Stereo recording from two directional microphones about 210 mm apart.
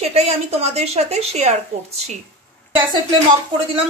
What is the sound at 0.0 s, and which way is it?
Speech, 30° right (ahead or behind).